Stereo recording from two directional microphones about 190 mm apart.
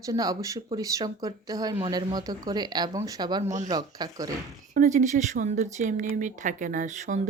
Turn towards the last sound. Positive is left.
turn(degrees=-40)  # may be behind; listen again after turning